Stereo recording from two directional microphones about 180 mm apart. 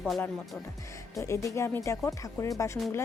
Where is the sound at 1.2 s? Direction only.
15° left (ahead or behind).